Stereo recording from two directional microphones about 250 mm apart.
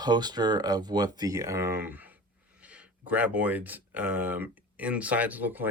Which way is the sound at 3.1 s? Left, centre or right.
Centre.